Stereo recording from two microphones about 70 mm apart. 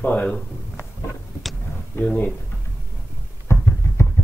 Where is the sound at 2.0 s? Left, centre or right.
Left.